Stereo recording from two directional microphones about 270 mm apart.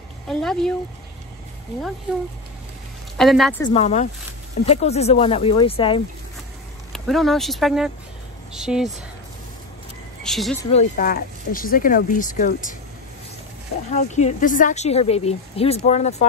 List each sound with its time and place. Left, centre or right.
0.3 s a woman's voice: centre
3.2 s a woman's voice: centre
3.6 s speech: left
6.9 s a woman's voice: centre
10.2 s a woman's voice: centre
10.7 s speech: left
13.8 s speech: left